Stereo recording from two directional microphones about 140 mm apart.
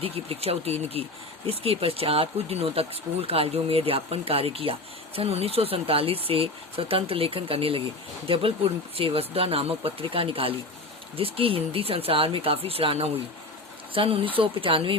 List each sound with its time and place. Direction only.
0.0 s speech: 45° right (ahead or behind)